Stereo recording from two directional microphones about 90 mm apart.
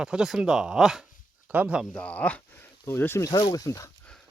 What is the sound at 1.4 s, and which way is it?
Speech, 20° right (ahead or behind).